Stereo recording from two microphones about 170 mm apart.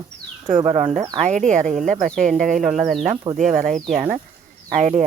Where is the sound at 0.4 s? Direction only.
40° right (ahead or behind).